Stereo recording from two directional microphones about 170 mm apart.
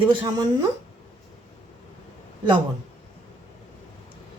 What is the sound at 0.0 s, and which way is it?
Speech, 30° right (ahead or behind).